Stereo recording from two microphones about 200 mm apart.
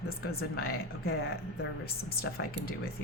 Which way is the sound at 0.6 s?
50° left (ahead or behind).